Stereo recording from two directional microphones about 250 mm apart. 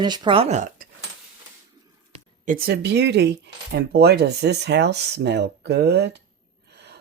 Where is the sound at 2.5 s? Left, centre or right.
Right.